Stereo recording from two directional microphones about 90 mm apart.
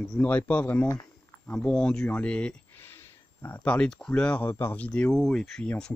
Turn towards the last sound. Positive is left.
turn(degrees=5)  # may be behind; listen again after turning